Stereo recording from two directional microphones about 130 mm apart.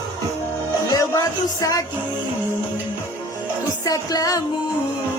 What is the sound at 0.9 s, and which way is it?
Music, 25° left (ahead or behind).